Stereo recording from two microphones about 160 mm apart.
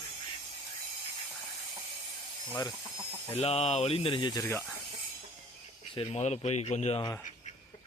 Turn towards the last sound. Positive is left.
turn(degrees=45)  # may be behind; listen again after turning